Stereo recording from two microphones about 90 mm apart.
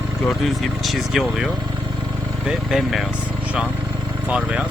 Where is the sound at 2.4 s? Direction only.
5° right (ahead or behind).